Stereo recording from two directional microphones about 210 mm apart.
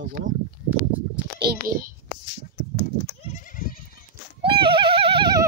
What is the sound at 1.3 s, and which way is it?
Speech, 45° right (ahead or behind).